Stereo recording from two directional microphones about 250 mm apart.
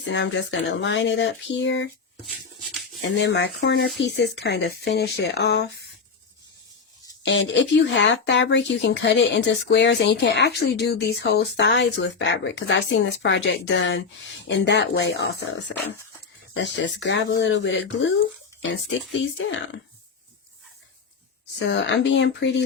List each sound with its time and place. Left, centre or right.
0.0 s speech: left
3.0 s speech: left
7.2 s speech: left
16.6 s speech: left
21.7 s speech: left